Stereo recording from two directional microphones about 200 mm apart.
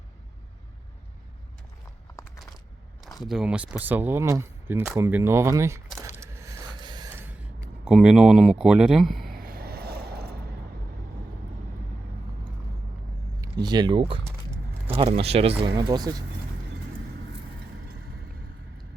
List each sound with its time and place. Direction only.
3.2 s speech: 5° right (ahead or behind)
6.0 s a sound: 15° right (ahead or behind)
7.9 s speech: 5° right (ahead or behind)
9.3 s vehicle: 45° right (ahead or behind)
13.4 s speech: 20° right (ahead or behind)